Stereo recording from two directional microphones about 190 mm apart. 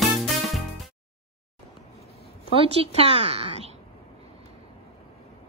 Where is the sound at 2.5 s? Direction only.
30° right (ahead or behind).